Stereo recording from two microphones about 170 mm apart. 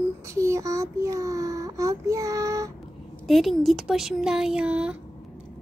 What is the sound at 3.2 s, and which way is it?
Speech, centre (ahead or behind).